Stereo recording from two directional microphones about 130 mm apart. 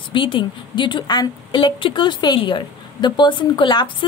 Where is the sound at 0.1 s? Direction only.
40° left (ahead or behind).